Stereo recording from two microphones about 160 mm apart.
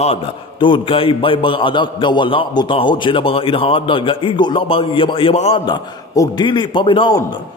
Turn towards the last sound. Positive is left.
turn(degrees=25)  # may be behind; listen again after turning